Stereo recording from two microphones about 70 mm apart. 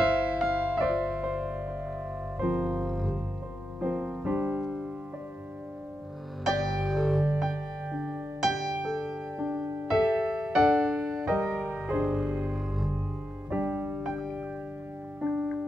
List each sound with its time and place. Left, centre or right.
0.4 s music: centre
6.4 s music: centre
9.4 s music: centre
11.8 s music: centre
13.5 s music: centre